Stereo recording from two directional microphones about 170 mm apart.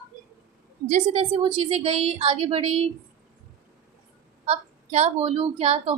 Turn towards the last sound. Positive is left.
turn(degrees=-35)  # may be behind; listen again after turning